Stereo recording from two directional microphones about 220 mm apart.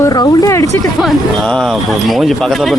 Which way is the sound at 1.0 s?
Centre (ahead or behind).